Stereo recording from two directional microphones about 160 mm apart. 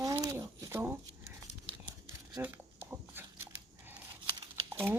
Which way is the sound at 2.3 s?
10° right (ahead or behind).